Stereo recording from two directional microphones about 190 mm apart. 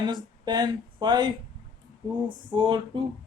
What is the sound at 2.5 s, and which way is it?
Speech, 25° right (ahead or behind).